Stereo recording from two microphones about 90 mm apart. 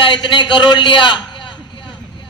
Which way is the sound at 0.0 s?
60° left (ahead or behind).